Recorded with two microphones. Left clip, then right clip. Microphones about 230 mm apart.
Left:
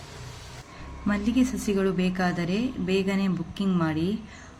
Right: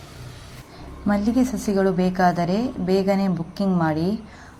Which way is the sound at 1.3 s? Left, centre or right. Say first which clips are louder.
Right 4 dB; centre.